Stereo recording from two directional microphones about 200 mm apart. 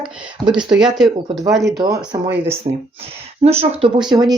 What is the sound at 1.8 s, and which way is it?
Speech, 20° right (ahead or behind).